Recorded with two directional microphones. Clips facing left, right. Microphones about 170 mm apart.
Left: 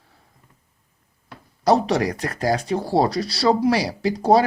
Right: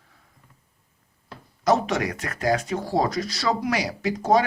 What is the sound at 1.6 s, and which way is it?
Speech, 35° left (ahead or behind).